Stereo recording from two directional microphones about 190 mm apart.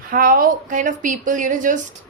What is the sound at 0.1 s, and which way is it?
A woman's voice, 50° right (ahead or behind).